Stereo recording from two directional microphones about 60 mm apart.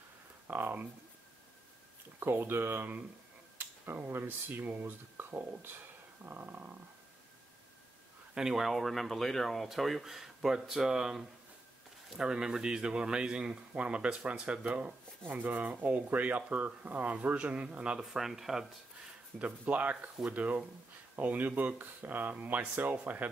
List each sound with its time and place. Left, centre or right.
0.5 s speech: right
2.1 s speech: right
8.4 s speech: centre
18.0 s speech: centre
19.3 s speech: right